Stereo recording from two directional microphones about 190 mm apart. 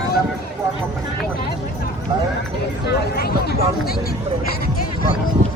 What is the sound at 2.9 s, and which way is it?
Speech, 60° left (ahead or behind).